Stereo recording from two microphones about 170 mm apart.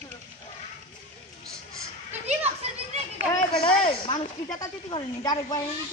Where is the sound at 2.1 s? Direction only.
40° right (ahead or behind).